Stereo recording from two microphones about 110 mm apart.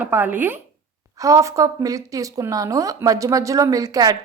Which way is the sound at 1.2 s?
30° right (ahead or behind).